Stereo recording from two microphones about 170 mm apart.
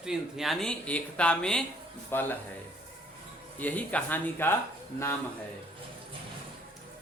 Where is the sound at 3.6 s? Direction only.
10° left (ahead or behind).